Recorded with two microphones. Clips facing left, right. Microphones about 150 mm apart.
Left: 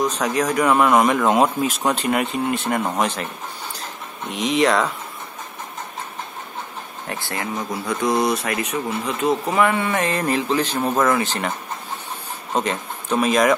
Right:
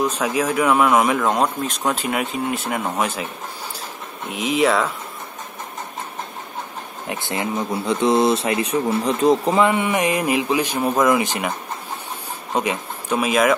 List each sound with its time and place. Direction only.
0.0 s a man's voice: 5° right (ahead or behind)
4.3 s speech: 5° right (ahead or behind)
7.1 s speech: 20° right (ahead or behind)
9.7 s a man's voice: 15° right (ahead or behind)
12.5 s speech: 10° right (ahead or behind)